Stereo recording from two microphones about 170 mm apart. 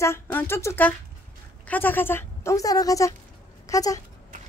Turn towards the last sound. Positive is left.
turn(degrees=20)  # may be behind; listen again after turning